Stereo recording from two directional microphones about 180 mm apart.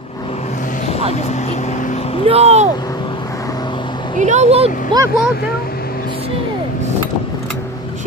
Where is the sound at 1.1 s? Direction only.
40° left (ahead or behind).